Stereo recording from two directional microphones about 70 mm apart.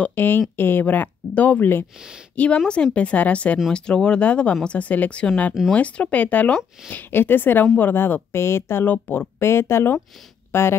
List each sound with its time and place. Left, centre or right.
0.0 s speech: left
2.3 s a woman's voice: centre; by 8.8 s left
8.8 s speech: left